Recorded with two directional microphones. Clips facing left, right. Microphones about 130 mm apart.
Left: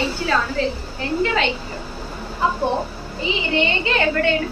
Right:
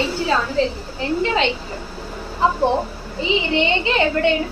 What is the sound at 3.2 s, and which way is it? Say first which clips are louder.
A woman's voice: right 2 dB; 25° right (ahead or behind).